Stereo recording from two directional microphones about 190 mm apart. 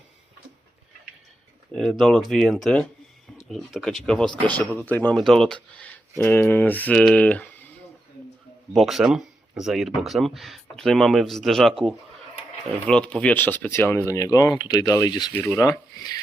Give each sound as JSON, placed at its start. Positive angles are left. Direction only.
{"t": 1.7, "sound": "speech", "side_deg": 0}
{"t": 8.7, "sound": "speech", "side_deg": 0}
{"t": 12.9, "sound": "speech", "side_deg": 5}